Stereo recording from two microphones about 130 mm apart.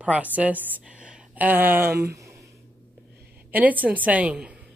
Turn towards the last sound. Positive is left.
turn(degrees=-10)  # may be behind; listen again after turning